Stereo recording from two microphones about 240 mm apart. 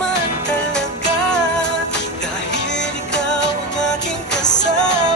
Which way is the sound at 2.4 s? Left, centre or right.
Left.